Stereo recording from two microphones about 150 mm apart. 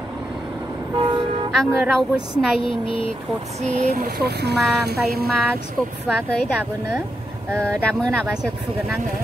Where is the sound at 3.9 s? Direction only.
85° right.